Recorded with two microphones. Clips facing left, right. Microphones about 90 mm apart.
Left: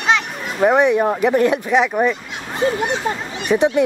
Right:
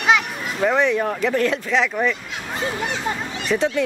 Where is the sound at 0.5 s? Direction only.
15° left (ahead or behind).